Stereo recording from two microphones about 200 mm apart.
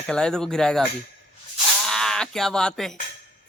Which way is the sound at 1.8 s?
Centre (ahead or behind).